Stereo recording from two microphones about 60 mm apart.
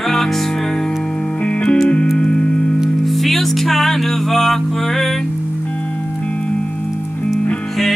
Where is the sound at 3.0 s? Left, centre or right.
Centre.